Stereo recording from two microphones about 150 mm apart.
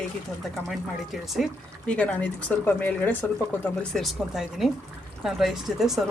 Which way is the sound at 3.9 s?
Centre (ahead or behind).